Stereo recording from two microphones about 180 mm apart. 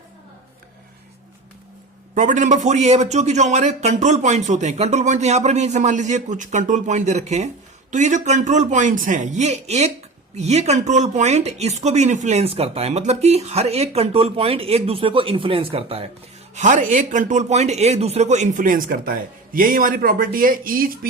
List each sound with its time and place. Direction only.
2.1 s a man's voice: 45° right (ahead or behind)
16.6 s speech: 45° right (ahead or behind)